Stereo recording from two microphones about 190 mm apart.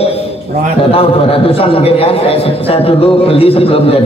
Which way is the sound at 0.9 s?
30° left (ahead or behind).